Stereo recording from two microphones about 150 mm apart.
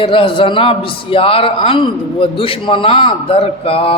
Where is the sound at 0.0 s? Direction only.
35° left (ahead or behind).